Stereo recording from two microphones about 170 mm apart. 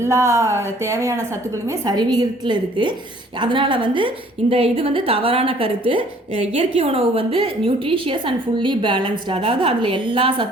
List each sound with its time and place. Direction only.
0.0 s a woman's voice: 15° right (ahead or behind)